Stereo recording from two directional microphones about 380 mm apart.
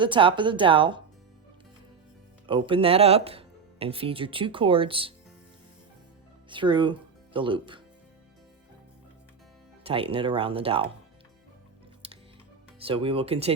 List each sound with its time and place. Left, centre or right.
0.0 s speech: centre
2.5 s speech: centre
6.5 s speech: centre
9.8 s speech: centre
12.8 s speech: centre